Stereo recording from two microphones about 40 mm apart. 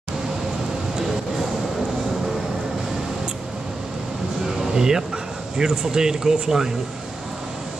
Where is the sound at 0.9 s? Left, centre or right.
Centre.